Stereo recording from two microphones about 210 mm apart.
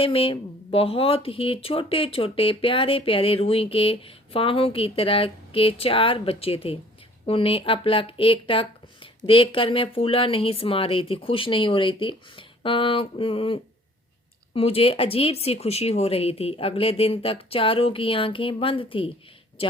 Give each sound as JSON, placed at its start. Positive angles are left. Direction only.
{"t": 0.0, "sound": "speech", "side_deg": 25}